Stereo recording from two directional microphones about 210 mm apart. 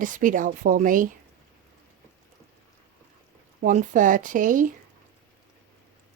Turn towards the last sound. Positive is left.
turn(degrees=-40)  # may be behind; listen again after turning